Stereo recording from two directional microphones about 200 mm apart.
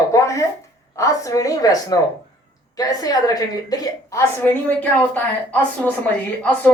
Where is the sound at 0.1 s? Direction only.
15° left (ahead or behind).